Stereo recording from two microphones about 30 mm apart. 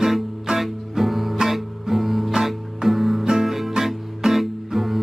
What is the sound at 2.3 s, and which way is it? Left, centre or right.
Music, centre.